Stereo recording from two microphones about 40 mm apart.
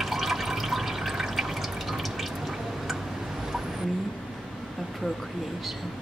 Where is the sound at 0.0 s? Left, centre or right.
Centre.